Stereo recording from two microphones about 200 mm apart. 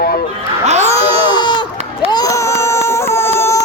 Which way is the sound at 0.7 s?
35° right (ahead or behind).